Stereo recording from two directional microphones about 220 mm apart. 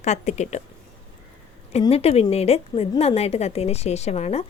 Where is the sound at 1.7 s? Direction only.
25° left (ahead or behind).